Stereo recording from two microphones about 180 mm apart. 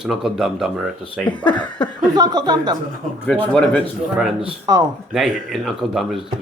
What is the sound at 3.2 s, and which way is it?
Speech, 5° left (ahead or behind).